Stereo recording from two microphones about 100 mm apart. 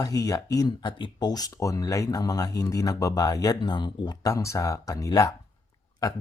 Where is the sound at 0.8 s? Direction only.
55° left (ahead or behind).